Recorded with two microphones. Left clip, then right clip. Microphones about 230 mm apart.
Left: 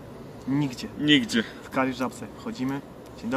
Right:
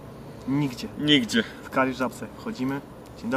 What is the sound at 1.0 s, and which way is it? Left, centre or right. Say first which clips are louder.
Speech: even; centre.